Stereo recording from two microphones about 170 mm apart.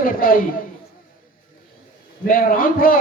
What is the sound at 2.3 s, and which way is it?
Speech, 55° left (ahead or behind).